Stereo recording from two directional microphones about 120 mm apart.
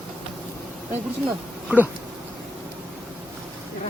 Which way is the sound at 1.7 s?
15° right (ahead or behind).